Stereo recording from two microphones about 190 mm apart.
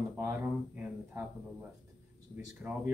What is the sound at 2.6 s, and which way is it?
Speech, 10° right (ahead or behind).